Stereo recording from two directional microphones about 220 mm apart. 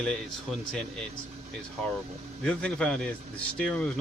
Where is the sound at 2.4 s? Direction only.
5° left (ahead or behind).